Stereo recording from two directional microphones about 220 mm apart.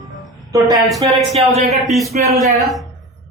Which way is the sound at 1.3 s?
30° right (ahead or behind).